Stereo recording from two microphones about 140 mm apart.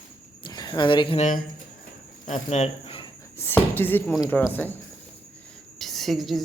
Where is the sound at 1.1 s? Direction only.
60° left (ahead or behind); by 3.0 s 45° left (ahead or behind).